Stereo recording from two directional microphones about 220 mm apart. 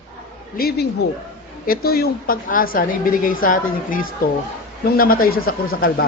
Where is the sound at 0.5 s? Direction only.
45° left (ahead or behind).